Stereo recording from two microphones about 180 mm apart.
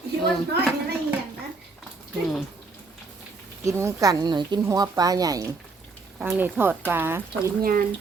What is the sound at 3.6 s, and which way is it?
Speech, 15° right (ahead or behind).